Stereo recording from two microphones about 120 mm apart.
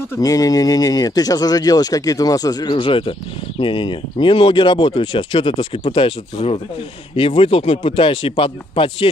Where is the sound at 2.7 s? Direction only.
50° left (ahead or behind).